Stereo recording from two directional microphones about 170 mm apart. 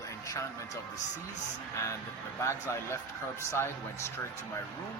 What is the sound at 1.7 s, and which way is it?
Speech, 15° left (ahead or behind).